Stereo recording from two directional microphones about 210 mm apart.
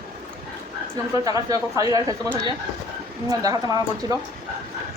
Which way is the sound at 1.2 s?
15° right (ahead or behind).